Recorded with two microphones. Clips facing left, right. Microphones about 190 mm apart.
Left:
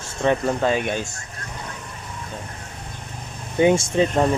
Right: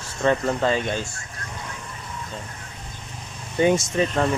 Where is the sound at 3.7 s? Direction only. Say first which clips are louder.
Left 3 dB; 30° left (ahead or behind).